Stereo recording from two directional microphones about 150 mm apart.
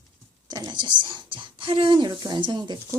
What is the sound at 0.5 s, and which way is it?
Speech, 30° right (ahead or behind).